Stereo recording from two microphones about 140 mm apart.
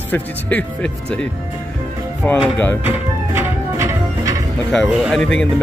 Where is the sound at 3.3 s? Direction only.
25° right (ahead or behind).